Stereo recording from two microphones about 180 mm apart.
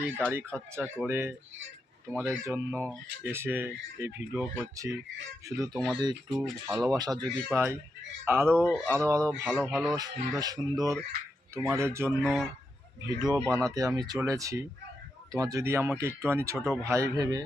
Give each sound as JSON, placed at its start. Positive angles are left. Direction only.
{"t": 0.0, "sound": "speech", "side_deg": -10}
{"t": 6.2, "sound": "speech", "side_deg": 0}
{"t": 6.8, "sound": "speech", "side_deg": -20}
{"t": 12.2, "sound": "speech", "side_deg": 0}
{"t": 13.1, "sound": "speech", "side_deg": -20}